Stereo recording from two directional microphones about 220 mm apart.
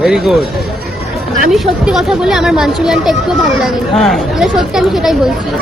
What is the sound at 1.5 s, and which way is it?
Speech, 5° right (ahead or behind).